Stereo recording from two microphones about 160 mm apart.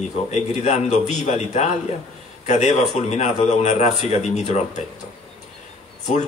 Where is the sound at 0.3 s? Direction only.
45° left (ahead or behind).